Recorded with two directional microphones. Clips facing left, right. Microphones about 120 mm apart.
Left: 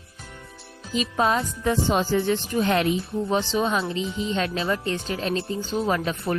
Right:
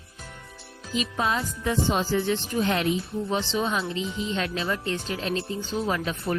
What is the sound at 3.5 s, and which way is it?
Speech, 45° left (ahead or behind).